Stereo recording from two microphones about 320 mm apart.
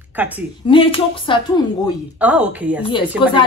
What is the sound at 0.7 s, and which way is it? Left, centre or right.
Speech, centre.